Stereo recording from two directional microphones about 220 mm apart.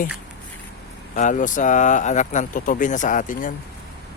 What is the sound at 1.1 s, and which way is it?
Speech, 35° left (ahead or behind).